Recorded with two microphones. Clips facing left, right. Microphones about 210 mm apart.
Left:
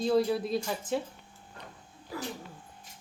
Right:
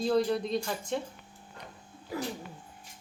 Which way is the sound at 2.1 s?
20° right (ahead or behind).